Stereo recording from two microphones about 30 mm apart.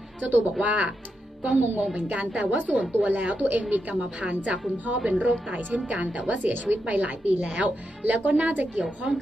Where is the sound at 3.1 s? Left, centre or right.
Right.